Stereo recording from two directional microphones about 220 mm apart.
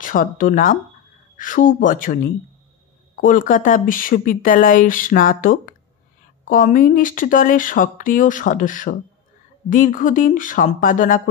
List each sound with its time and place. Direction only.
0.0 s speech: 40° left (ahead or behind)
3.2 s speech: 40° left (ahead or behind)